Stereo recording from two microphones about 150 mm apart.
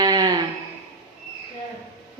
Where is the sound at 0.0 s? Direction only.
25° right (ahead or behind).